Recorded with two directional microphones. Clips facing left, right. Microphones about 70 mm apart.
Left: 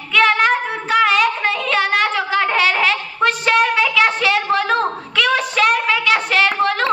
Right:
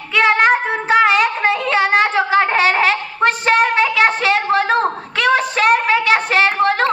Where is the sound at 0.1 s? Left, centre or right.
Right.